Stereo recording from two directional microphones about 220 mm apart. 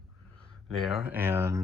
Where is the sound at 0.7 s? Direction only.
Centre (ahead or behind).